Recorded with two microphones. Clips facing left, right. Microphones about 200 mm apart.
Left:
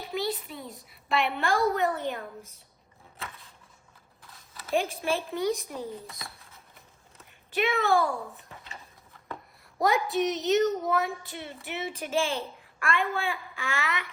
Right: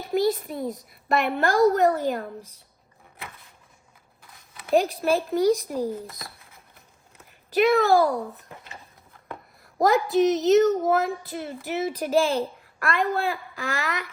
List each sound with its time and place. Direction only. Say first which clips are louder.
0.1 s a woman's voice: right 9 dB; 45° right (ahead or behind)
5.3 s a woman's voice: right 8 dB; 40° right (ahead or behind)
5.9 s speech: right 7 dB; centre (ahead or behind)
7.5 s a woman's voice: right 7 dB; 40° right (ahead or behind)
9.9 s speech: right 9 dB; centre (ahead or behind)
10.8 s a woman's voice: right 5 dB; 40° right (ahead or behind)